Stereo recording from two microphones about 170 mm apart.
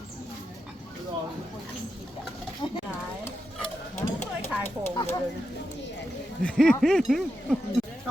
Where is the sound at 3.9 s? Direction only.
45° left (ahead or behind).